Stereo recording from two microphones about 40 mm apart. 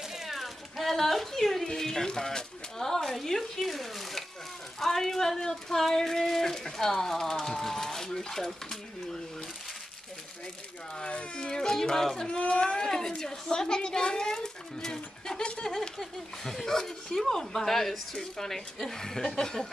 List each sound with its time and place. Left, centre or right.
0.1 s a child's voice: centre
11.0 s speech: left
11.3 s a child's voice: centre
12.3 s speech: left
12.7 s a child's voice: centre
18.1 s speech: centre
18.5 s a child's voice: centre